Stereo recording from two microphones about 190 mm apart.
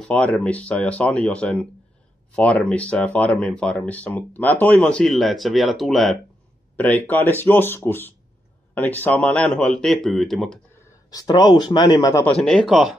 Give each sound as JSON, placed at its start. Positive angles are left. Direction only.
{"t": 0.1, "sound": "speech", "side_deg": 5}
{"t": 11.1, "sound": "speech", "side_deg": 20}
{"t": 12.4, "sound": "speech", "side_deg": 5}